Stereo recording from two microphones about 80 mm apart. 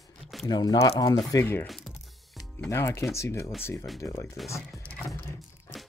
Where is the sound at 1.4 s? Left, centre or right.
Left.